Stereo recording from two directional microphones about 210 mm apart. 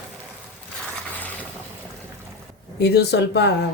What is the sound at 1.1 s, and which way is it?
Boat, 10° left (ahead or behind).